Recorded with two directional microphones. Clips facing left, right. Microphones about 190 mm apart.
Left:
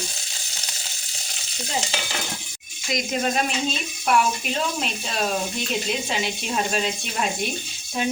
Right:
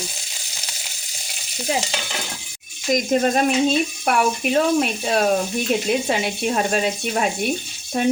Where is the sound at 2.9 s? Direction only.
45° right (ahead or behind).